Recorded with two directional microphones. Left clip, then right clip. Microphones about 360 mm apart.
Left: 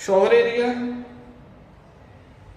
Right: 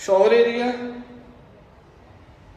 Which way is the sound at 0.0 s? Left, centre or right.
Centre.